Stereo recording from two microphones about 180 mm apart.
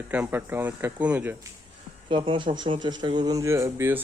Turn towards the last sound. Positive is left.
turn(degrees=-15)  # may be behind; listen again after turning